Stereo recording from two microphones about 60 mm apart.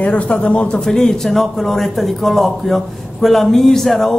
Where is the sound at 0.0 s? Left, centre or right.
Left.